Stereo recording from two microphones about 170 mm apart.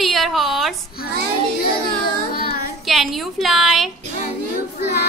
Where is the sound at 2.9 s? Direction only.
Centre (ahead or behind).